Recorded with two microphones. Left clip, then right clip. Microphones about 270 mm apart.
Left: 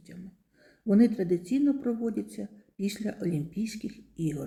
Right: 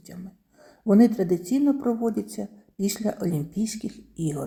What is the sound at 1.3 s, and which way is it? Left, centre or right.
A woman's voice, centre.